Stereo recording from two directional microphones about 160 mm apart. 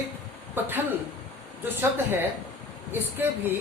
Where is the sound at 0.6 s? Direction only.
15° right (ahead or behind).